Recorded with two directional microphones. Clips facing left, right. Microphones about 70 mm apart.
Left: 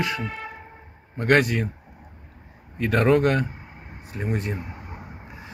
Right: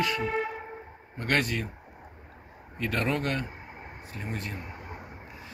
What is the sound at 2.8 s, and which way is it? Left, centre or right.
Speech, left.